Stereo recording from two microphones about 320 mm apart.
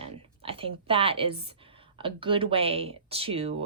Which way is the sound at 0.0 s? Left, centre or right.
Centre.